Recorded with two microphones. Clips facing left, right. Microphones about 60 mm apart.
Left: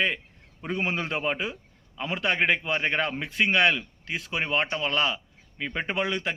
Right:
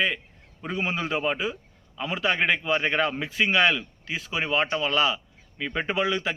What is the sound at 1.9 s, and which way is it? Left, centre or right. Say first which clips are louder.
Speech: right 1 dB; left.